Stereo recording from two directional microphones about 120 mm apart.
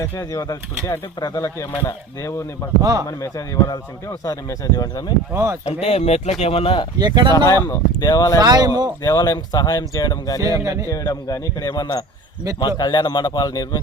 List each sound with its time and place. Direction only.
0.0 s speech: 30° left (ahead or behind)
3.2 s speech: 30° left (ahead or behind)
5.3 s speech: 20° right (ahead or behind)
5.6 s speech: 65° left (ahead or behind)
7.0 s speech: 35° right (ahead or behind)
7.3 s speech: 25° left (ahead or behind)
8.4 s speech: 30° right (ahead or behind)
9.0 s speech: 30° left (ahead or behind)
10.4 s speech: 30° right (ahead or behind)
10.8 s speech: 30° left (ahead or behind)